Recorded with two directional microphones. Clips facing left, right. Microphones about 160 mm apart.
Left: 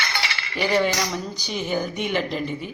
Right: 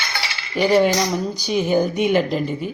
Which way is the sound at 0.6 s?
25° right (ahead or behind).